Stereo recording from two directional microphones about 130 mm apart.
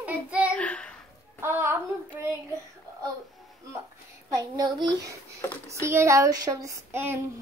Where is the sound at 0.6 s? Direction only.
10° left (ahead or behind).